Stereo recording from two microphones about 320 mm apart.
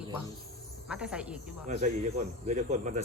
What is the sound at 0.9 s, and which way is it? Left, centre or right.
Speech, centre.